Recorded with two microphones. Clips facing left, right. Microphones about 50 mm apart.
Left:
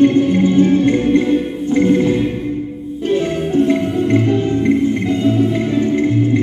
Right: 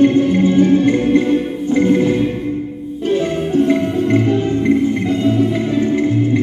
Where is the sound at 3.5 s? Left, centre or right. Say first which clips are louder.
Even; centre.